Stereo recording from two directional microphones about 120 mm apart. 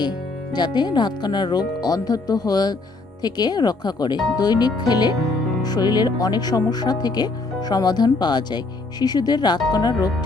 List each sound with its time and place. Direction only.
0.5 s speech: 35° left (ahead or behind)